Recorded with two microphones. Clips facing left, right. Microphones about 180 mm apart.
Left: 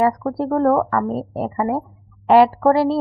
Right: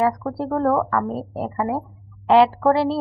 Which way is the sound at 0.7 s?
15° left (ahead or behind).